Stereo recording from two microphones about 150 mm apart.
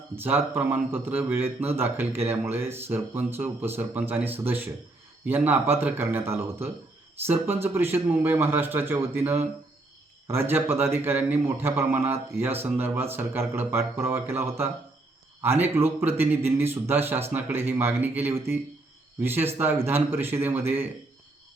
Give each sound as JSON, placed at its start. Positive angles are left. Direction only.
{"t": 0.2, "sound": "a man's voice", "side_deg": -15}